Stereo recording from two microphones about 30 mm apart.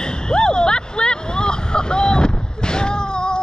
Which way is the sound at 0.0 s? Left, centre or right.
Left.